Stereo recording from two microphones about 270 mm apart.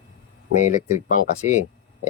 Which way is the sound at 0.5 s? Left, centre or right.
Left.